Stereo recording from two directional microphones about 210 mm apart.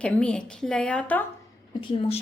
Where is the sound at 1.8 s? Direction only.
30° left (ahead or behind).